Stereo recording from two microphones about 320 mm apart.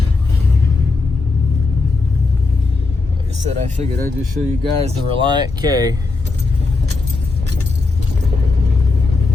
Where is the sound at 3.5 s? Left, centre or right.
Right.